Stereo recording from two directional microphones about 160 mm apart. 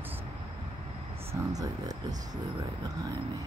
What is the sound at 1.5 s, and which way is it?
Speech, 25° right (ahead or behind).